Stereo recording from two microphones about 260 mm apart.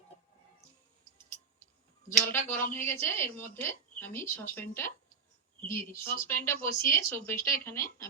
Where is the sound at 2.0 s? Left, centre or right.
Centre.